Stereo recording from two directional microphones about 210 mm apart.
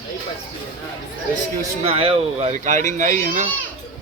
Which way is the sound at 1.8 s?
30° right (ahead or behind).